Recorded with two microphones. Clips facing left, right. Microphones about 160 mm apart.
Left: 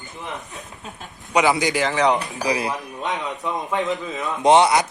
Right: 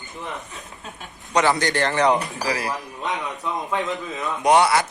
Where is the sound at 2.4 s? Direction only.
20° left (ahead or behind).